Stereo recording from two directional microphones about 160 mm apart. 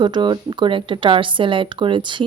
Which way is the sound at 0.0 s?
30° right (ahead or behind).